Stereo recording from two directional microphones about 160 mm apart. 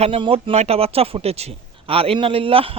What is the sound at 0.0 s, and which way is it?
A man's voice, 35° right (ahead or behind).